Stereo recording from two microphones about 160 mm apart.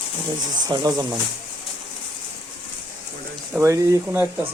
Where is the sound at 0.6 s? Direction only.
25° right (ahead or behind).